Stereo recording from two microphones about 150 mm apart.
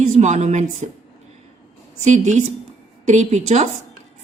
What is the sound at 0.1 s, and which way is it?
Speech, 50° right (ahead or behind).